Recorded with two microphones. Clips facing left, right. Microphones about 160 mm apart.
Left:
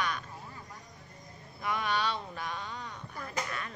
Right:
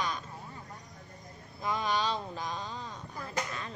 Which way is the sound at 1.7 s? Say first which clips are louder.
Right 1 dB; 30° right (ahead or behind).